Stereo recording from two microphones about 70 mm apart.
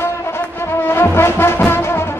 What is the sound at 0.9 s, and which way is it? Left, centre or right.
Music, left.